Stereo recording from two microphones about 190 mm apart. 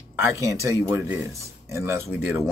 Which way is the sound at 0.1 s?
15° right (ahead or behind).